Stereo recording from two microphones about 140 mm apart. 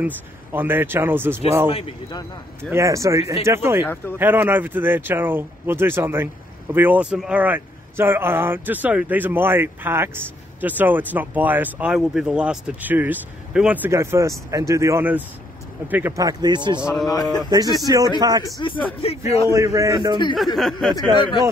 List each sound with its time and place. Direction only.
0.0 s speech: 15° right (ahead or behind)
1.7 s a man's voice: 45° left (ahead or behind)
2.7 s speech: 20° right (ahead or behind)
3.8 s speech: 15° left (ahead or behind)
4.2 s speech: 15° right (ahead or behind)
13.8 s speech: 20° right (ahead or behind)
17.1 s speech: 25° left (ahead or behind)
17.5 s speech: 25° right (ahead or behind)
18.6 s speech: 35° left (ahead or behind)
19.4 s speech: 25° right (ahead or behind)
20.5 s speech: centre (ahead or behind)
21.1 s speech: 35° left (ahead or behind)